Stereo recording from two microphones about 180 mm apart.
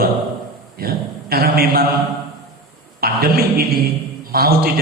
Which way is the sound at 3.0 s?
55° right (ahead or behind).